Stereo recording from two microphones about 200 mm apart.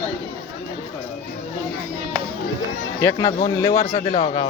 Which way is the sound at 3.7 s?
40° left (ahead or behind).